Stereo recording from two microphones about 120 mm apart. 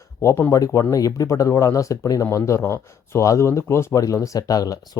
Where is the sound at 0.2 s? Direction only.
20° left (ahead or behind).